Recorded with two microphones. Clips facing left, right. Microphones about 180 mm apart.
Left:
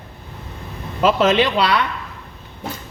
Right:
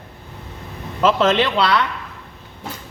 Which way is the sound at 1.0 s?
15° left (ahead or behind).